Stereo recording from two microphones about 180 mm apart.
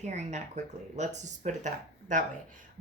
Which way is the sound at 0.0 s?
40° right (ahead or behind).